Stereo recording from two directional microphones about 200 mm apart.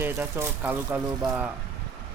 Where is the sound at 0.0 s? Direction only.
10° right (ahead or behind).